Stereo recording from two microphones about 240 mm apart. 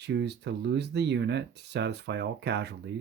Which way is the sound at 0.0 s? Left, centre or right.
Right.